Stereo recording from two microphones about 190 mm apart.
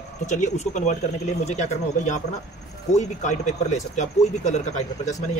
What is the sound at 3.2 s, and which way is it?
Speech, 40° left (ahead or behind).